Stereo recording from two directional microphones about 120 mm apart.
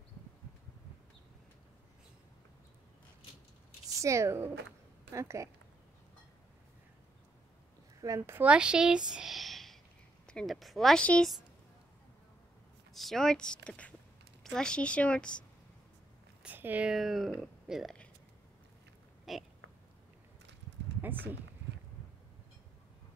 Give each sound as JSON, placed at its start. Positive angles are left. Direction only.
{"t": 4.0, "sound": "speech", "side_deg": -25}
{"t": 8.0, "sound": "speech", "side_deg": -25}
{"t": 8.4, "sound": "a woman's voice", "side_deg": -10}
{"t": 12.9, "sound": "a woman's voice", "side_deg": 0}
{"t": 16.4, "sound": "speech", "side_deg": -15}
{"t": 19.3, "sound": "speech", "side_deg": 0}